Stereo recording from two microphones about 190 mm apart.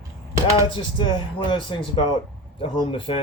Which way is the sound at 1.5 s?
25° left (ahead or behind).